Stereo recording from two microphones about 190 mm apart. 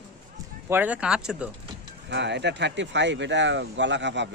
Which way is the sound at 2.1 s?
65° right (ahead or behind).